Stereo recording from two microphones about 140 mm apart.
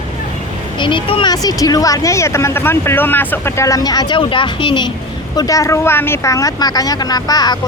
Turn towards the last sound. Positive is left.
turn(degrees=30)  # may be behind; listen again after turning